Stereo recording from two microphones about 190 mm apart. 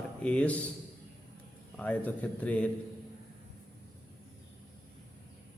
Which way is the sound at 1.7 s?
10° left (ahead or behind).